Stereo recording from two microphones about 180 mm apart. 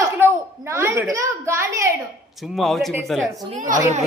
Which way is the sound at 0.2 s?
15° right (ahead or behind).